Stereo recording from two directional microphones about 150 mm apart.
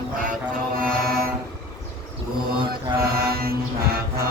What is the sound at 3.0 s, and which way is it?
Music, 90° right.